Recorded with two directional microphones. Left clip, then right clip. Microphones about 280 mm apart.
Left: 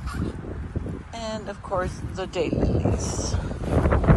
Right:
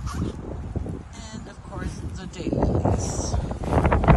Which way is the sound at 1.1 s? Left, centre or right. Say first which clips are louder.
Left 9 dB; centre.